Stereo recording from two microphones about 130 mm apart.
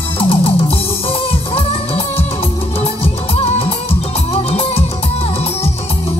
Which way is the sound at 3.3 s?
45° left (ahead or behind).